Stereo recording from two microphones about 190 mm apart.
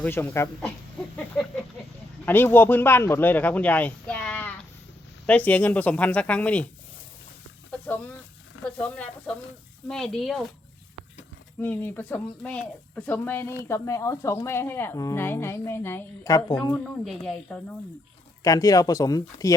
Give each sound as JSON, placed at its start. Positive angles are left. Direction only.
{"t": 0.0, "sound": "speech", "side_deg": 10}
{"t": 2.2, "sound": "speech", "side_deg": 10}
{"t": 7.7, "sound": "a sound", "side_deg": 5}
{"t": 8.6, "sound": "a woman's voice", "side_deg": 5}
{"t": 11.6, "sound": "speech", "side_deg": 10}
{"t": 16.7, "sound": "a woman's voice", "side_deg": 0}
{"t": 18.4, "sound": "speech", "side_deg": 20}